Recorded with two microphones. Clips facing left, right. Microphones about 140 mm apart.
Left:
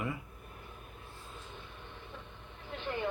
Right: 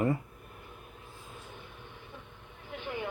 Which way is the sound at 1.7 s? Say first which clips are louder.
Even; 15° right (ahead or behind).